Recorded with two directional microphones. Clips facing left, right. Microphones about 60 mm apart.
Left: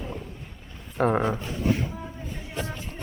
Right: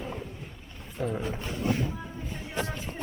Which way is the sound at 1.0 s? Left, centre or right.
Left.